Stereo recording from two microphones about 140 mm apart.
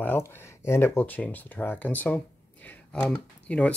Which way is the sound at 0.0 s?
15° left (ahead or behind).